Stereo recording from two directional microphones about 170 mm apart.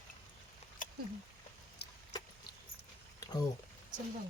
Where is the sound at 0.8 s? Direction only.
50° left (ahead or behind).